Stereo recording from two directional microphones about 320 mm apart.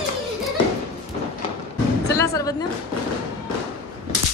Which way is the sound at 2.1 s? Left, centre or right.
Centre.